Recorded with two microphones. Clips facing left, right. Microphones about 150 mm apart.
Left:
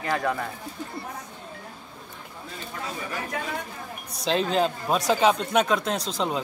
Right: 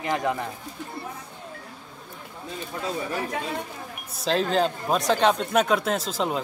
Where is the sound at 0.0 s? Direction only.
20° right (ahead or behind).